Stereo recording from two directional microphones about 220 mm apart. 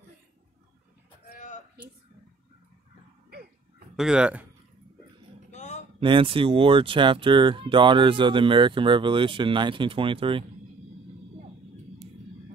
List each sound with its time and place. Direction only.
3.9 s speech: 5° right (ahead or behind)
5.5 s a sound: 30° left (ahead or behind)
5.9 s speech: 25° right (ahead or behind)